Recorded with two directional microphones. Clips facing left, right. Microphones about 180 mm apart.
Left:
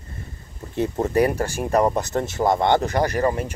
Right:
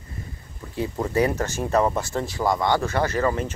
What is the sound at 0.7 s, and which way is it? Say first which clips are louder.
Speech: left 3 dB; 20° left (ahead or behind).